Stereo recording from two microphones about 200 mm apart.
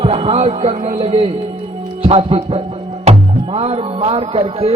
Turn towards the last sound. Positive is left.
turn(degrees=-30)  # may be behind; listen again after turning